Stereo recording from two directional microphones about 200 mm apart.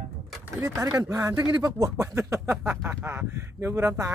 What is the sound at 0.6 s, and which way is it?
Speech, 15° right (ahead or behind).